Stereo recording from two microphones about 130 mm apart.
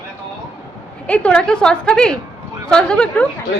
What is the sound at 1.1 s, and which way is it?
A woman's voice, 10° left (ahead or behind).